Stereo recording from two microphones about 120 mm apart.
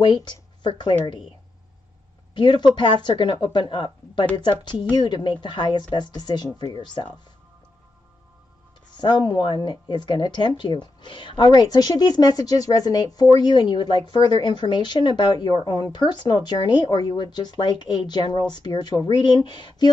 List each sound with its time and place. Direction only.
0.0 s speech: 40° left (ahead or behind)
2.3 s speech: 40° left (ahead or behind)
8.9 s speech: 40° left (ahead or behind)